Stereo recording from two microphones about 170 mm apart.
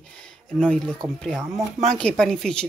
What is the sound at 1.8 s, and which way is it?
Speech, 5° left (ahead or behind).